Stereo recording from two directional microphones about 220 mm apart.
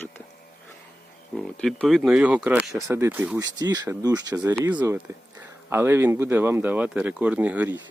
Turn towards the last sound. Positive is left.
turn(degrees=-5)  # may be behind; listen again after turning